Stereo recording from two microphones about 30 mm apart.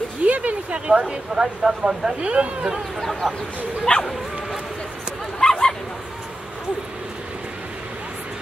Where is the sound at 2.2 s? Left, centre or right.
Right.